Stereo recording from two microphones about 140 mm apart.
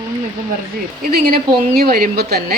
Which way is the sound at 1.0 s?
90° right.